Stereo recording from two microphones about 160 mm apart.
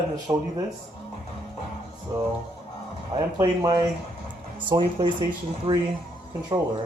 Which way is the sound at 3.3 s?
20° right (ahead or behind).